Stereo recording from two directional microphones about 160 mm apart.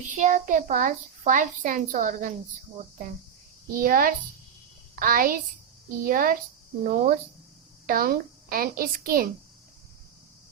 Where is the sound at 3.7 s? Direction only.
60° right (ahead or behind).